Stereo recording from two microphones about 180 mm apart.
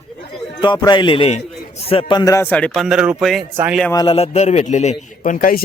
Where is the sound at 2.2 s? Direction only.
15° left (ahead or behind); by 3.8 s 10° right (ahead or behind).